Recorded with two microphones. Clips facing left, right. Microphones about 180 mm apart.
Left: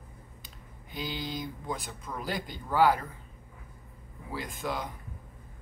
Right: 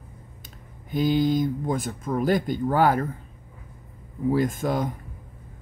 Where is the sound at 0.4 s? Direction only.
50° right (ahead or behind).